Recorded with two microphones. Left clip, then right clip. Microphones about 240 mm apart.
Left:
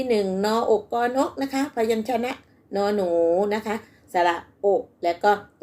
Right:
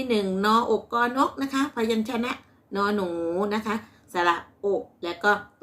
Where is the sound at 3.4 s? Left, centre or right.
Centre.